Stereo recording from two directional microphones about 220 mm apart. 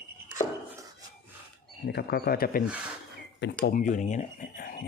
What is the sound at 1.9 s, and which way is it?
Speech, 45° left (ahead or behind).